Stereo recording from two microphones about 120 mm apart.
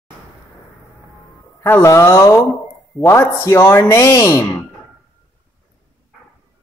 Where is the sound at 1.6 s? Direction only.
25° left (ahead or behind).